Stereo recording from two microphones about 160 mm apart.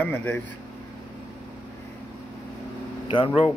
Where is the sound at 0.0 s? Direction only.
10° left (ahead or behind).